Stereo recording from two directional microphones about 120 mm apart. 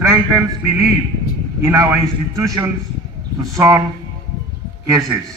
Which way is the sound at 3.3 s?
30° right (ahead or behind).